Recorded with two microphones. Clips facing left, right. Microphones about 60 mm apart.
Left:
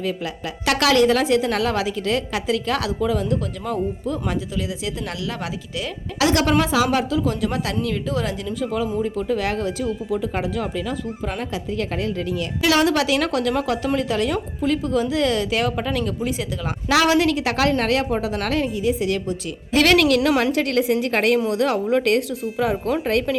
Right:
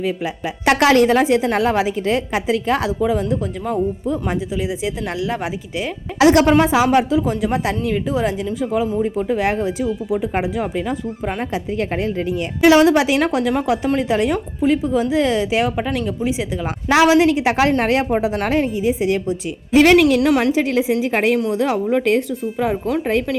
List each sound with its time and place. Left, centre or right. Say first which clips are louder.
0.6 s a woman's voice: right 4 dB; right; by 23.4 s centre